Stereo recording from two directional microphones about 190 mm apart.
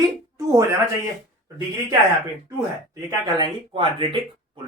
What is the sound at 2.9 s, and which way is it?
Speech, 20° right (ahead or behind).